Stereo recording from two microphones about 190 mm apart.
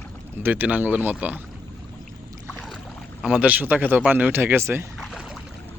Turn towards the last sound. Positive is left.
turn(degrees=0)  # may be behind; listen again after turning